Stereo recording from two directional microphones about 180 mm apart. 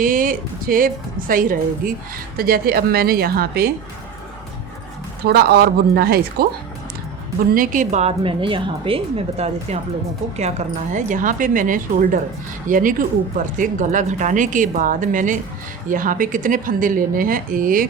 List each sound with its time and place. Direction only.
0.0 s a woman's voice: 50° right (ahead or behind)
5.2 s a woman's voice: 60° right (ahead or behind)
7.5 s a woman's voice: 50° right (ahead or behind)
10.9 s speech: 45° right (ahead or behind)